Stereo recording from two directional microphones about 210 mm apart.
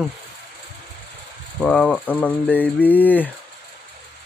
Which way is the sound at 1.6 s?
5° left (ahead or behind).